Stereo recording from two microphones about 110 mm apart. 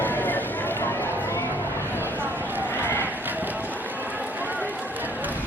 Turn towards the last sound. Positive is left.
turn(degrees=-15)  # may be behind; listen again after turning